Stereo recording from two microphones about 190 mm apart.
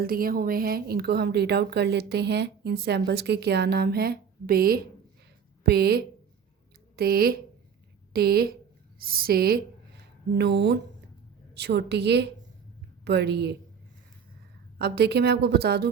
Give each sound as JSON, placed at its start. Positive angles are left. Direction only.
{"t": 0.0, "sound": "a woman's voice", "side_deg": -50}
{"t": 14.8, "sound": "a woman's voice", "side_deg": -55}